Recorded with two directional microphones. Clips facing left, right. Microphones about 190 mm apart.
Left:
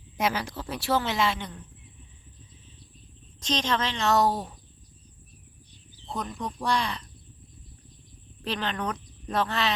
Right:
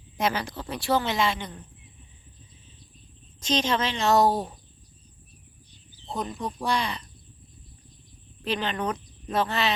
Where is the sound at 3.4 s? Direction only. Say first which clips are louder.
Right 2 dB; 5° right (ahead or behind).